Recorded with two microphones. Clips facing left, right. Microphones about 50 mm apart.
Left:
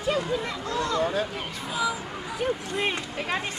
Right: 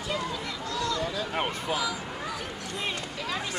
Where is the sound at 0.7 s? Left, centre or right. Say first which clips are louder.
Left 5 dB; left.